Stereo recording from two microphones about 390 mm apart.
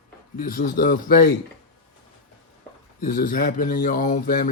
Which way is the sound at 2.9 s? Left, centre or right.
Left.